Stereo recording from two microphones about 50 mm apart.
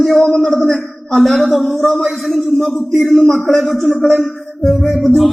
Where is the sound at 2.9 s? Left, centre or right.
Centre.